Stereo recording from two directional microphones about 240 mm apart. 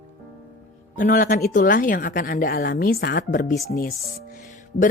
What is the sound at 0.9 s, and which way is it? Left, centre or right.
A woman's voice, left.